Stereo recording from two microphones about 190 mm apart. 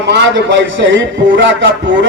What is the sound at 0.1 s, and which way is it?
A man's voice, 65° right (ahead or behind).